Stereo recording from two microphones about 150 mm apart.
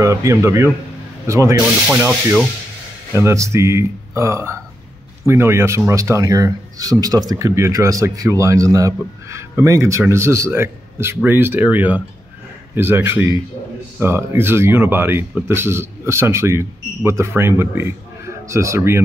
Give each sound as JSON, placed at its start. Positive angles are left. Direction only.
{"t": 0.0, "sound": "speech", "side_deg": -20}
{"t": 1.9, "sound": "speech", "side_deg": -5}
{"t": 3.2, "sound": "speech", "side_deg": -20}